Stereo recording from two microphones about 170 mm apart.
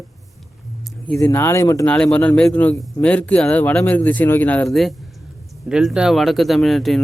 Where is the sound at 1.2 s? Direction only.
15° left (ahead or behind).